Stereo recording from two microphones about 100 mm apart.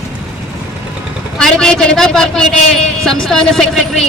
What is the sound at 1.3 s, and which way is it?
A man's voice, 5° left (ahead or behind).